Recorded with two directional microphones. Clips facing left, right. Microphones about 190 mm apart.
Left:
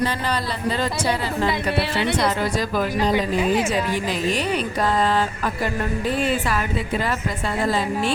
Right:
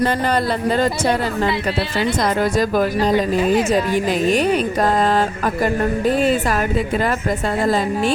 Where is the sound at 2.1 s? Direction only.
50° right (ahead or behind).